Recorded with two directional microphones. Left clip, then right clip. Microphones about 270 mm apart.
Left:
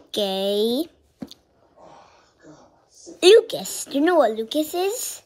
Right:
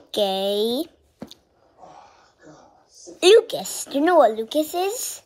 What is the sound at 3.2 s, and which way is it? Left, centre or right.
A child's voice, centre.